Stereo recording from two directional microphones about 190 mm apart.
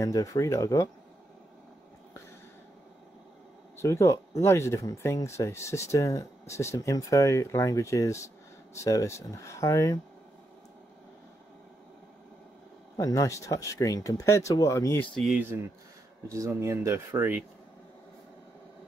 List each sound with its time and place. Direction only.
0.0 s speech: 15° left (ahead or behind)
3.7 s speech: 15° left (ahead or behind)
12.9 s speech: 20° left (ahead or behind)
15.1 s speech: centre (ahead or behind)
16.3 s speech: 15° right (ahead or behind)